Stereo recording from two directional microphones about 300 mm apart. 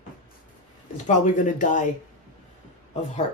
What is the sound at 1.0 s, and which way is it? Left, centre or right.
Speech, left.